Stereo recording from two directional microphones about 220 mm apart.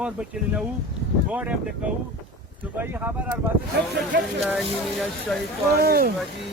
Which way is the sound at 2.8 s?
10° right (ahead or behind).